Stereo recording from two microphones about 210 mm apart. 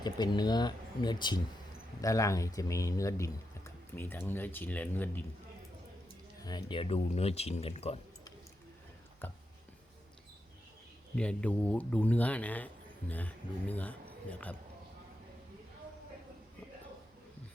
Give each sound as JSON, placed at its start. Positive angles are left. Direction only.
{"t": 0.0, "sound": "speech", "side_deg": 20}
{"t": 6.4, "sound": "speech", "side_deg": 20}
{"t": 9.2, "sound": "speech", "side_deg": 10}
{"t": 11.1, "sound": "speech", "side_deg": 5}